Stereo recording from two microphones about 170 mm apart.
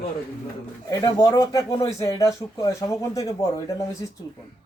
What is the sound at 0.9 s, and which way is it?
Speech, 20° left (ahead or behind).